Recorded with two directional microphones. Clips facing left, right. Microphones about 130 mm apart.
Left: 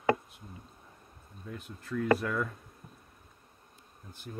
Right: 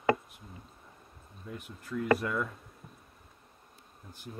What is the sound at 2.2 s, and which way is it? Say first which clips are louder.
Speech: even; 5° right (ahead or behind).